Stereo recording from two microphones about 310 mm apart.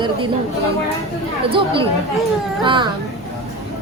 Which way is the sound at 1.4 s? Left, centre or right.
Centre.